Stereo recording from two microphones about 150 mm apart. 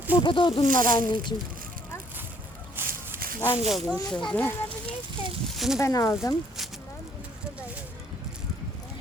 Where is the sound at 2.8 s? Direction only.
15° right (ahead or behind).